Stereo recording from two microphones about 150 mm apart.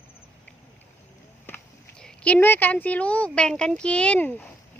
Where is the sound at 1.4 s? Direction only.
10° left (ahead or behind).